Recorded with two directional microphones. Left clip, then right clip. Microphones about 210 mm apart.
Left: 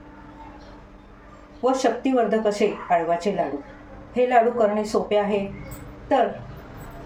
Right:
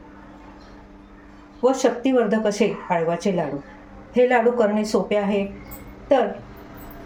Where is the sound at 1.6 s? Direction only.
30° right (ahead or behind).